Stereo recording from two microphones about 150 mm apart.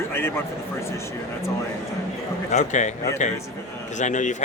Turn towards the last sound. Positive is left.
turn(degrees=55)  # may be behind; listen again after turning